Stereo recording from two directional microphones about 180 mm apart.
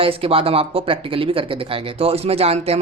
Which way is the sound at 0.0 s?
30° right (ahead or behind).